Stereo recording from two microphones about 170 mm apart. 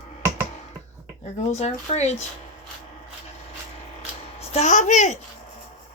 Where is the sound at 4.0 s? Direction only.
35° left (ahead or behind).